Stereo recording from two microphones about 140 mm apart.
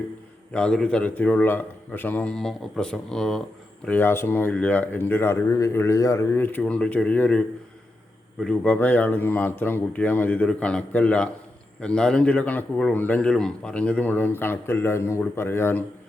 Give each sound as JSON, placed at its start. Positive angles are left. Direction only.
{"t": 0.5, "sound": "a man's voice", "side_deg": 5}